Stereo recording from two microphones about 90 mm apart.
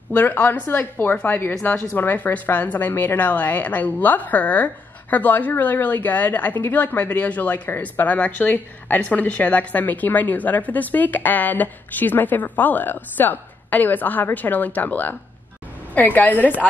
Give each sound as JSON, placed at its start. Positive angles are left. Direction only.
{"t": 0.1, "sound": "a woman's voice", "side_deg": 20}